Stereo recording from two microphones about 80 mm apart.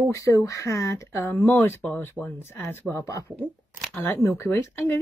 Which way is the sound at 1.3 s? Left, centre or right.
Left.